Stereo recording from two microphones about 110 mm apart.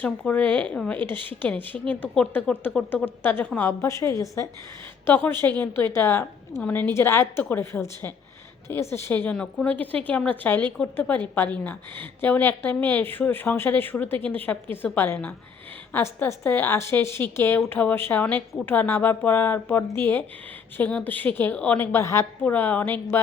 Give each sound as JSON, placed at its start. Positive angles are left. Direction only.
{"t": 0.0, "sound": "a woman's voice", "side_deg": 15}